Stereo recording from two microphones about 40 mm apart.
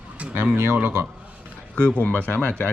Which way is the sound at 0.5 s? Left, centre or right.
Right.